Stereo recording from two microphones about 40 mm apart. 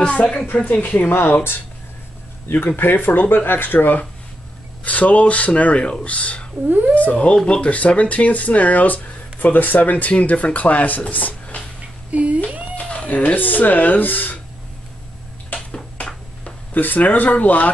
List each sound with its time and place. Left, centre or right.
0.0 s speech: left
0.7 s speech: left
2.6 s speech: left
4.8 s speech: left
12.1 s a sound: right
12.9 s speech: left
16.7 s speech: left